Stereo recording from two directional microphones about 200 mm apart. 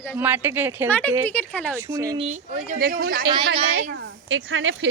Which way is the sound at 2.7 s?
50° right (ahead or behind).